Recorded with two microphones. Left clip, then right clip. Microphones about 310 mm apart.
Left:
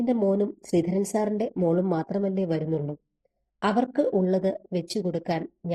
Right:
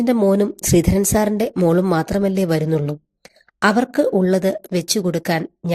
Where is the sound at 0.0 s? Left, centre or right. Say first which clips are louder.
Right 8 dB; right.